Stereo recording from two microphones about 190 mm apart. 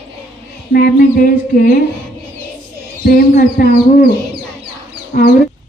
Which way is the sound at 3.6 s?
45° left (ahead or behind).